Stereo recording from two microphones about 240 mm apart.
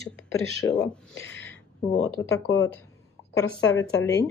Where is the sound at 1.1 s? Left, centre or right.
Left.